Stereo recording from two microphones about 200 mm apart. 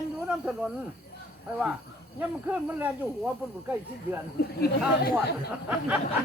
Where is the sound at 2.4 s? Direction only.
5° right (ahead or behind).